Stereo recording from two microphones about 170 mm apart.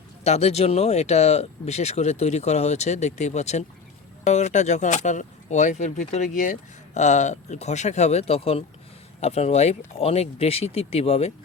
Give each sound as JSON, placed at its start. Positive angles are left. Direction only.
{"t": 0.3, "sound": "speech", "side_deg": 40}